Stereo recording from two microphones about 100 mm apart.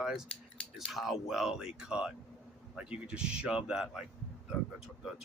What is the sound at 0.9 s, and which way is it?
Speech, centre (ahead or behind).